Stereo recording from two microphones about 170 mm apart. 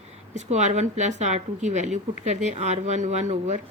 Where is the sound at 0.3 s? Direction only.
45° right (ahead or behind).